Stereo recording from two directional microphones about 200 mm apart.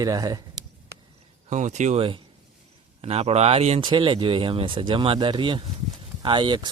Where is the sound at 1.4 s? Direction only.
35° right (ahead or behind).